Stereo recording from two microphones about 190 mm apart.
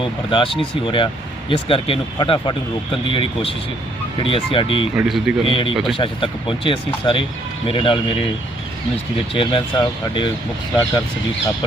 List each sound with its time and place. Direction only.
0.0 s speech: 25° left (ahead or behind)
4.9 s speech: centre (ahead or behind)
5.5 s speech: 25° left (ahead or behind)
5.7 s speech: centre (ahead or behind)
6.0 s speech: 25° left (ahead or behind)
9.3 s speech: 25° left (ahead or behind)